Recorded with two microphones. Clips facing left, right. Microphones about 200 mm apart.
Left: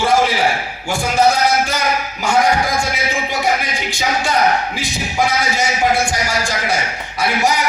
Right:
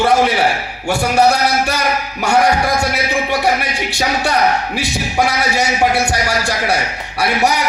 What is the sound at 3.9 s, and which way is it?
Speech, 65° right (ahead or behind).